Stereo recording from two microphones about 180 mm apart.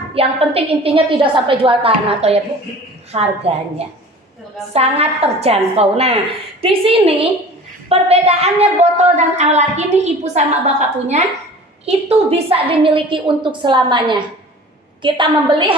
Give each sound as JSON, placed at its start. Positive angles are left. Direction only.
{"t": 0.1, "sound": "a woman's voice", "side_deg": -30}